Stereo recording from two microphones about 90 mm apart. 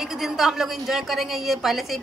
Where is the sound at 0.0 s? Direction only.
5° right (ahead or behind).